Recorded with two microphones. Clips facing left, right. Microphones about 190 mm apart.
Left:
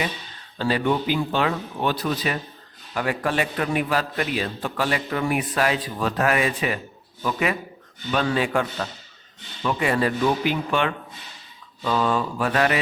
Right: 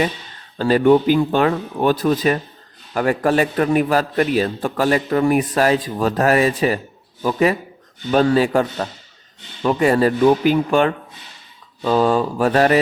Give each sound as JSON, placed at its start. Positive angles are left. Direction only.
{"t": 0.6, "sound": "a man's voice", "side_deg": -45}